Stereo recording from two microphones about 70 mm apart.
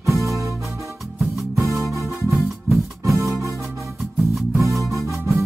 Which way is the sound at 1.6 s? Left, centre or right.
Right.